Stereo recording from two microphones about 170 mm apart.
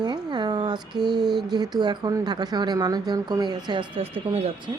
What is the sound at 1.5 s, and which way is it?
Speech, 25° right (ahead or behind).